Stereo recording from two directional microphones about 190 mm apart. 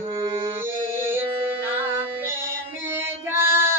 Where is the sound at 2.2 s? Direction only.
10° right (ahead or behind).